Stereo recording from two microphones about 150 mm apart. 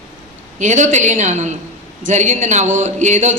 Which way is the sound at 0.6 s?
50° right (ahead or behind).